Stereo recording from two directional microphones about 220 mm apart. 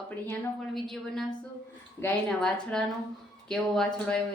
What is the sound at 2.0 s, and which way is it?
Speech, 5° left (ahead or behind).